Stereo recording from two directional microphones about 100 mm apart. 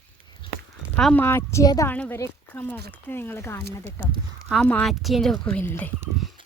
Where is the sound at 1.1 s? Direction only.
25° left (ahead or behind).